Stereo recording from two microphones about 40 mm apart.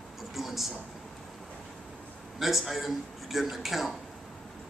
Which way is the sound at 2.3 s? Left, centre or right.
Centre.